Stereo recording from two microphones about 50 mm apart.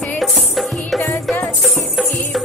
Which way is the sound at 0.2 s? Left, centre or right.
Centre.